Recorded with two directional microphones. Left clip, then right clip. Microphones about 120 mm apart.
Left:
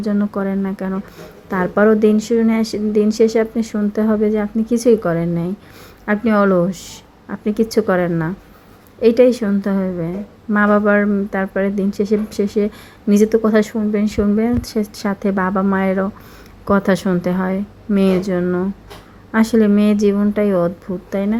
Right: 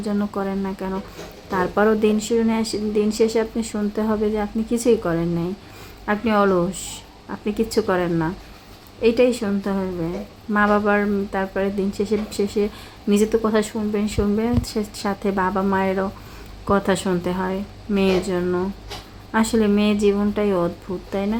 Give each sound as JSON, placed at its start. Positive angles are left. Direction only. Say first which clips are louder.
{"t": 0.1, "sound": "speech", "louder": "left 4 dB", "side_deg": 30}
{"t": 2.6, "sound": "speech", "louder": "left 4 dB", "side_deg": 40}
{"t": 13.4, "sound": "speech", "louder": "left 5 dB", "side_deg": 45}
{"t": 13.7, "sound": "speech", "louder": "left 4 dB", "side_deg": 35}
{"t": 19.3, "sound": "speech", "louder": "left 4 dB", "side_deg": 40}